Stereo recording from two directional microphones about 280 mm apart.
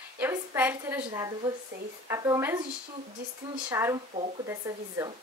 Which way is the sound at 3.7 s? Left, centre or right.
Centre.